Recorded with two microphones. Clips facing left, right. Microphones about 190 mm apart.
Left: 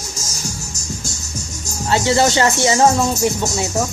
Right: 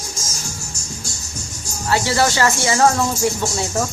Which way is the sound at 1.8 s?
20° left (ahead or behind).